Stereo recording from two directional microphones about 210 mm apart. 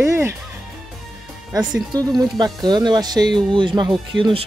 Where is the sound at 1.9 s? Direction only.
20° right (ahead or behind).